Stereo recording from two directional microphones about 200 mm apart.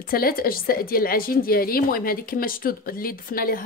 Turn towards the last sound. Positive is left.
turn(degrees=45)  # may be behind; listen again after turning